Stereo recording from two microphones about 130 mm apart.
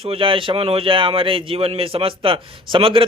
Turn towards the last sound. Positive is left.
turn(degrees=-45)  # may be behind; listen again after turning